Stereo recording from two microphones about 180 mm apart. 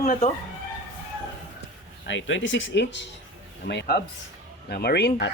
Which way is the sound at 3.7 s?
65° left (ahead or behind).